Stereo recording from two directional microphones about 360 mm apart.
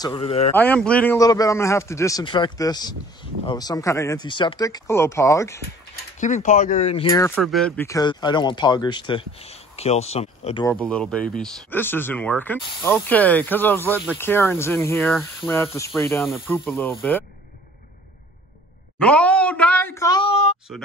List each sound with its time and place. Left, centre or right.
0.0 s a man's voice: centre
0.6 s a man's voice: centre
6.1 s a man's voice: centre
18.9 s speech: centre
20.7 s speech: centre